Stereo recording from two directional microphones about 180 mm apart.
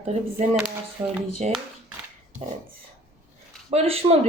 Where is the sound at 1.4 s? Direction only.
40° right (ahead or behind).